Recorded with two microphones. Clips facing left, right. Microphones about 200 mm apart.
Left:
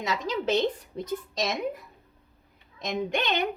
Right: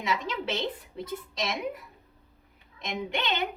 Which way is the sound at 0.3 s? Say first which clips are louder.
Left 6 dB; 40° left (ahead or behind).